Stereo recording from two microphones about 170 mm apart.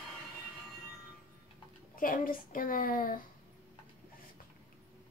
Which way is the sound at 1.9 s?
55° left (ahead or behind).